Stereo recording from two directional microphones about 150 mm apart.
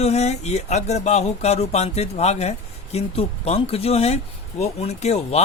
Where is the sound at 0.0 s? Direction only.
45° left (ahead or behind).